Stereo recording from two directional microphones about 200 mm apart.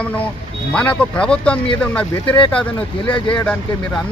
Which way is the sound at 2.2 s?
25° left (ahead or behind).